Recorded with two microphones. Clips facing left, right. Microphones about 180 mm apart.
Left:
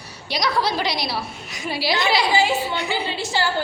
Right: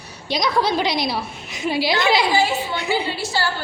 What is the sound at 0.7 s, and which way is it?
A woman's voice, 20° right (ahead or behind).